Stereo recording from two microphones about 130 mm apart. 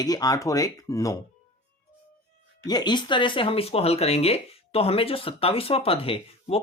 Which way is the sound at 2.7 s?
35° left (ahead or behind).